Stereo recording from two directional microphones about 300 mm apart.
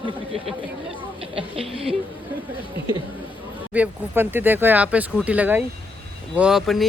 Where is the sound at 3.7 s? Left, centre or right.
Centre.